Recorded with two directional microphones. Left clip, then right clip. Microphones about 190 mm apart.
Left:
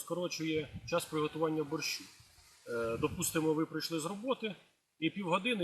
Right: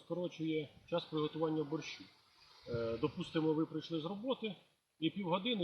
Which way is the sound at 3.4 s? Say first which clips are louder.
Left 2 dB; 20° left (ahead or behind).